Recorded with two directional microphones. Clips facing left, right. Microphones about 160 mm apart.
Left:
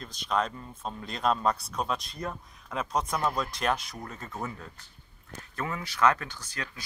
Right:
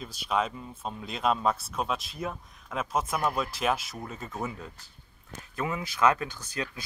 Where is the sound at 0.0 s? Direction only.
5° right (ahead or behind).